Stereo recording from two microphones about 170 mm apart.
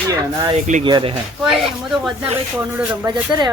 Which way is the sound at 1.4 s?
Centre (ahead or behind).